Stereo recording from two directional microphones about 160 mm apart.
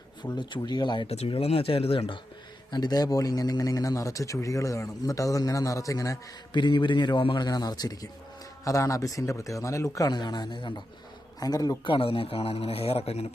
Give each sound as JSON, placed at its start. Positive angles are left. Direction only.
{"t": 0.2, "sound": "speech", "side_deg": 30}
{"t": 2.7, "sound": "speech", "side_deg": 25}